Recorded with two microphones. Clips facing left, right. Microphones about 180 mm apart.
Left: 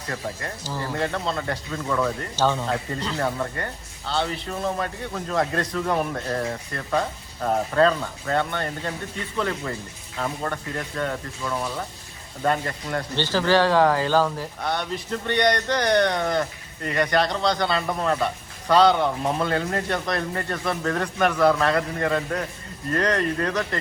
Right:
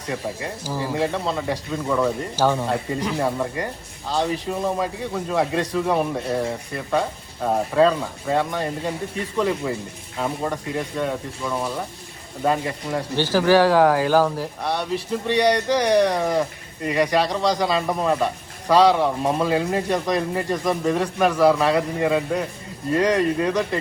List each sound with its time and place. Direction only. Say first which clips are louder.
0.1 s speech: right 4 dB; 10° right (ahead or behind)